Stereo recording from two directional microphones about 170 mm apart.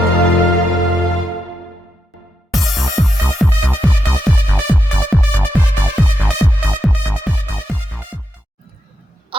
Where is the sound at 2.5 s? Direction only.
Centre (ahead or behind).